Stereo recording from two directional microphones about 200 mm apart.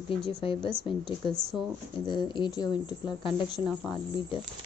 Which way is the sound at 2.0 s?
25° left (ahead or behind).